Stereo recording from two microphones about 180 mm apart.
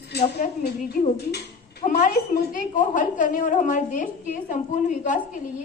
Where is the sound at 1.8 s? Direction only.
45° left (ahead or behind).